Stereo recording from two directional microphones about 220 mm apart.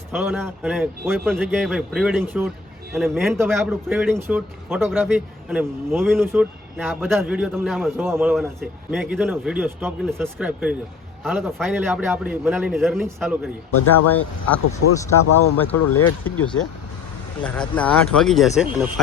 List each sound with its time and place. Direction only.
0.1 s speech: centre (ahead or behind)
13.7 s speech: 90° left
14.1 s speech: 5° left (ahead or behind)